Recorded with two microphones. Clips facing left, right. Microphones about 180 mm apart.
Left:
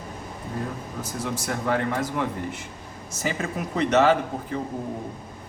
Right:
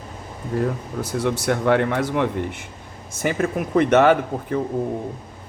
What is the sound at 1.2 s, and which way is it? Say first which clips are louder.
Speech: right 7 dB; 70° right (ahead or behind).